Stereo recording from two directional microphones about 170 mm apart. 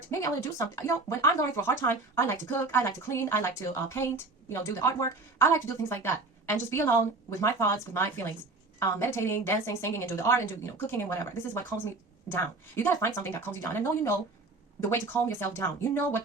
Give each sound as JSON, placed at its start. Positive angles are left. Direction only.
{"t": 0.1, "sound": "speech", "side_deg": 20}